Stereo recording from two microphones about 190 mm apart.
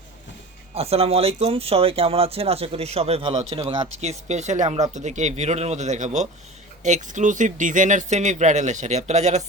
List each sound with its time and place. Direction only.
0.7 s speech: 30° right (ahead or behind)